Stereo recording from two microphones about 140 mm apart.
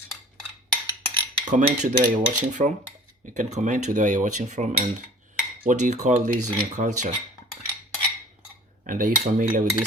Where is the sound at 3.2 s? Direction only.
60° right (ahead or behind).